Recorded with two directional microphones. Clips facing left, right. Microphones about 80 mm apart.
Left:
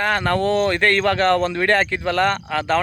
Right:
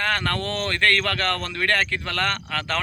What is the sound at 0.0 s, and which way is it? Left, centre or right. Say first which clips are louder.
Speech: left 6 dB; centre.